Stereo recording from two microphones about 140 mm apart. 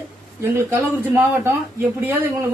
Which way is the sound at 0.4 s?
15° right (ahead or behind).